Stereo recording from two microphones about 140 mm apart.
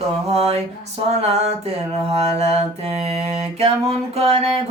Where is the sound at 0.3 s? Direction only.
50° right (ahead or behind).